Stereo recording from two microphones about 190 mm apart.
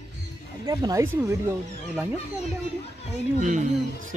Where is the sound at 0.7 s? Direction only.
20° right (ahead or behind).